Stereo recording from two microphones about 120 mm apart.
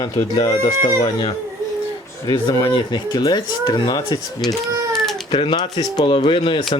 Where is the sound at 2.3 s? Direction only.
35° left (ahead or behind).